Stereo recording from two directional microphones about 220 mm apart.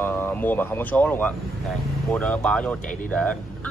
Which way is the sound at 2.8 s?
35° left (ahead or behind).